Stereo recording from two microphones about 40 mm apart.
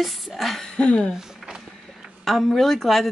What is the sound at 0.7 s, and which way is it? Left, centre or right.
Speech, left.